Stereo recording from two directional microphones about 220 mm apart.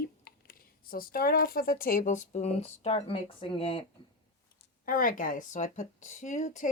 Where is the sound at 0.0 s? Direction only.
40° left (ahead or behind); by 3.8 s 25° left (ahead or behind).